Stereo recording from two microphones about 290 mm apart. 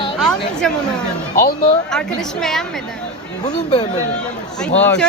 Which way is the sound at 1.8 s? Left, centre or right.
Centre.